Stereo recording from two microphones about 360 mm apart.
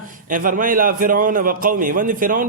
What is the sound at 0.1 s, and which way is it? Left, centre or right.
A man's voice, right.